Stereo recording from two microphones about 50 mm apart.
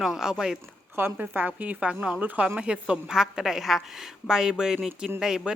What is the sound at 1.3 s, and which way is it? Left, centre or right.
A woman's voice, right.